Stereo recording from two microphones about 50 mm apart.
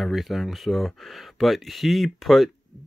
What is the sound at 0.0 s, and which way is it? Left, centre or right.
Speech, centre.